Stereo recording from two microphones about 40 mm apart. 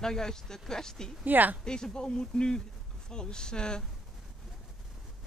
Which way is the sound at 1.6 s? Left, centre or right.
Centre.